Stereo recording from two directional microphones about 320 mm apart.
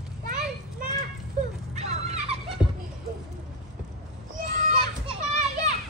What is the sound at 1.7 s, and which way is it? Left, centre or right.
Dog, centre.